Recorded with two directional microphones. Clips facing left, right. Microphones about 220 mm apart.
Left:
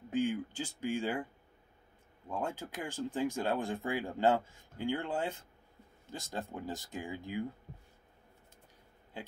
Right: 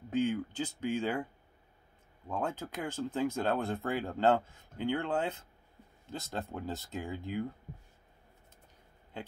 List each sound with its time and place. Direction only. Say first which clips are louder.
0.1 s speech: right 2 dB; 10° left (ahead or behind)
2.2 s speech: right 2 dB; 10° left (ahead or behind)
4.7 s speech: right 2 dB; 60° right (ahead or behind)
5.0 s speech: right 3 dB; 10° left (ahead or behind)